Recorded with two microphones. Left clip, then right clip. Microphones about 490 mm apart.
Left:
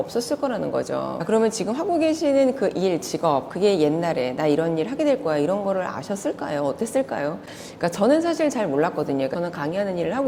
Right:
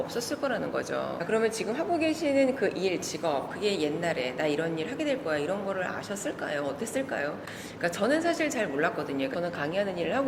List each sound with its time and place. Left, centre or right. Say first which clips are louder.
0.2 s speech: left 6 dB; left
3.2 s a woman's voice: left 9 dB; left